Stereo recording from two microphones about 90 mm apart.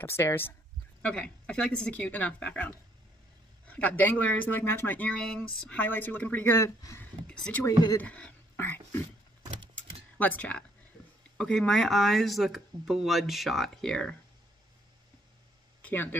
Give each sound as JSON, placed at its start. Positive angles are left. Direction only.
{"t": 0.0, "sound": "speech", "side_deg": 30}
{"t": 1.0, "sound": "speech", "side_deg": 10}
{"t": 6.6, "sound": "speech", "side_deg": 35}
{"t": 7.2, "sound": "speech", "side_deg": 10}
{"t": 7.6, "sound": "speech", "side_deg": 40}
{"t": 8.0, "sound": "speech", "side_deg": 15}
{"t": 9.8, "sound": "a sound", "side_deg": 15}
{"t": 11.3, "sound": "speech", "side_deg": 10}
{"t": 15.8, "sound": "speech", "side_deg": 20}